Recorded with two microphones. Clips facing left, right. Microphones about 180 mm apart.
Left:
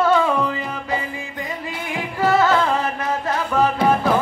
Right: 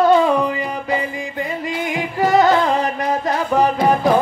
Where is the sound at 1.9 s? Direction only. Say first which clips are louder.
Right 2 dB; 15° right (ahead or behind).